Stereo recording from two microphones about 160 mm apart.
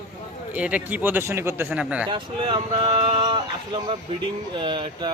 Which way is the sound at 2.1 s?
30° right (ahead or behind).